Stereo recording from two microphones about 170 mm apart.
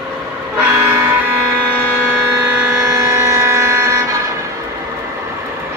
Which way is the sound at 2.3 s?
15° right (ahead or behind).